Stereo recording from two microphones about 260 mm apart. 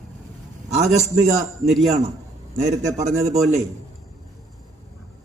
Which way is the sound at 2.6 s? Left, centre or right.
Right.